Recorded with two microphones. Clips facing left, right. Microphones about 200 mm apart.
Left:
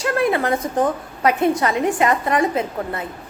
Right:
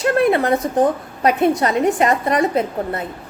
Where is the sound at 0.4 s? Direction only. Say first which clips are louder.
Right 3 dB; 35° right (ahead or behind).